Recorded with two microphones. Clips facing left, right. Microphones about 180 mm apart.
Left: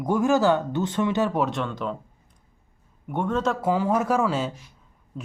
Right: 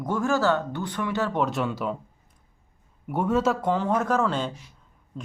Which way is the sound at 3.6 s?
10° left (ahead or behind).